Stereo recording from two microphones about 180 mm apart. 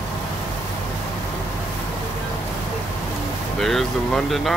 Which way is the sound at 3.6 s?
Centre (ahead or behind).